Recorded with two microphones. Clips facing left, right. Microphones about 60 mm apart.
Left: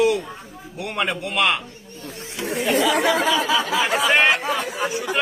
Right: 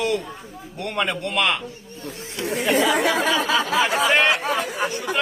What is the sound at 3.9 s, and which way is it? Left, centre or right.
Speech, centre.